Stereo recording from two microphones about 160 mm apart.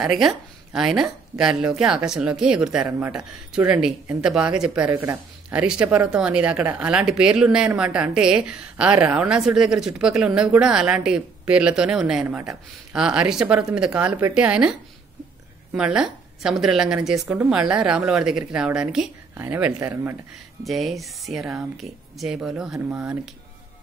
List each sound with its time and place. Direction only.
0.0 s a woman's voice: centre (ahead or behind)
20.6 s speech: centre (ahead or behind)